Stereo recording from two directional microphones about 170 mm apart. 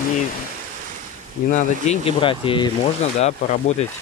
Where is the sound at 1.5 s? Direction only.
35° left (ahead or behind).